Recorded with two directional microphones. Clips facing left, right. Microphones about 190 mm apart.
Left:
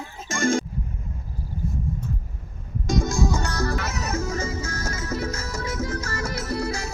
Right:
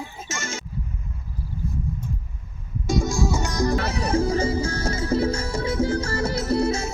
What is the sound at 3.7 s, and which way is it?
Music, 30° right (ahead or behind).